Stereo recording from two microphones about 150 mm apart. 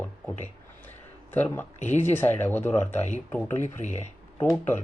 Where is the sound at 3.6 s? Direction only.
50° left (ahead or behind).